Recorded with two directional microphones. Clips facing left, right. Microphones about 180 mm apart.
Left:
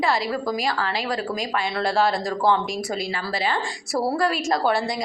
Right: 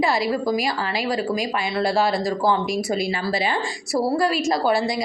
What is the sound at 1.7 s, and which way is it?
Speech, 5° right (ahead or behind).